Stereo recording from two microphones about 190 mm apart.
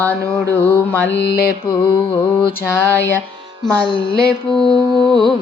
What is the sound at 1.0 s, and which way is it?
Mantra, 65° left (ahead or behind).